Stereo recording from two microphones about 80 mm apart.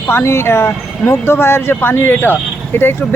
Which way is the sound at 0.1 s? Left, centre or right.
Left.